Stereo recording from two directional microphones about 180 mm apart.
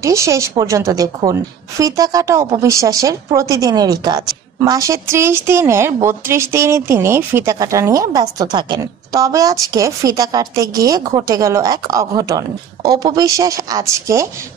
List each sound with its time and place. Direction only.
0.0 s a woman's voice: 15° right (ahead or behind)